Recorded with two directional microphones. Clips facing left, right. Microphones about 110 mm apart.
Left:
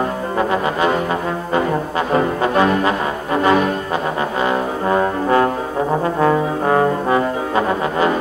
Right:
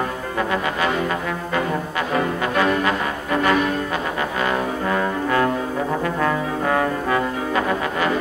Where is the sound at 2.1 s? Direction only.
30° left (ahead or behind).